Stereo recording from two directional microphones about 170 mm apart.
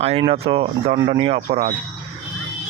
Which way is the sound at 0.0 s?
35° right (ahead or behind).